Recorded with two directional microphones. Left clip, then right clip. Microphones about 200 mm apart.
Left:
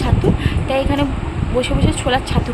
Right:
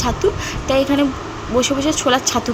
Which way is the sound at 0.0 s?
15° right (ahead or behind).